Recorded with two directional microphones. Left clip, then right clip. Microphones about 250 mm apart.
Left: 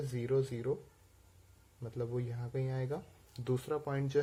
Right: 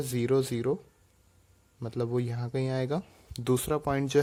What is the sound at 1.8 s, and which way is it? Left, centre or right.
Speech, right.